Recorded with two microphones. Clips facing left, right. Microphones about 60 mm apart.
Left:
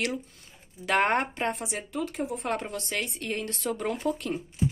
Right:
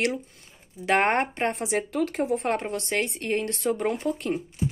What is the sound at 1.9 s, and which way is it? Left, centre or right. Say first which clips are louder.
Speech: right 3 dB; right.